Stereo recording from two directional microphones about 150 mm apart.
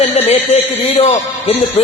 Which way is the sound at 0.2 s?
45° left (ahead or behind).